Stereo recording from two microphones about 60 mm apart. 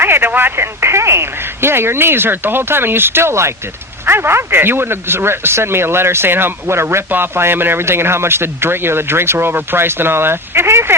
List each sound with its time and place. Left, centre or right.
0.0 s speech: right